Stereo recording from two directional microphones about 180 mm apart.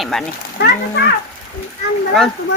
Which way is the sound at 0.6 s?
65° left (ahead or behind).